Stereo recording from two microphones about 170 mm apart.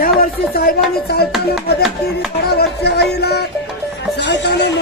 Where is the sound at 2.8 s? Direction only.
75° left (ahead or behind).